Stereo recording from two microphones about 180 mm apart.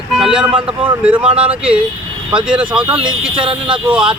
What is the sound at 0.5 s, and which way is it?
Speech, 30° right (ahead or behind).